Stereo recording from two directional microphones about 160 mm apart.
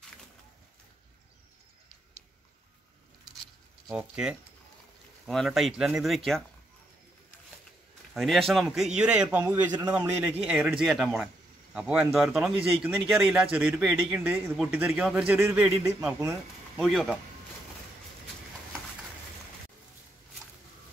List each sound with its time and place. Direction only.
3.8 s a man's voice: 5° right (ahead or behind)
8.1 s a man's voice: centre (ahead or behind); by 16.8 s 15° right (ahead or behind)
16.8 s a man's voice: centre (ahead or behind)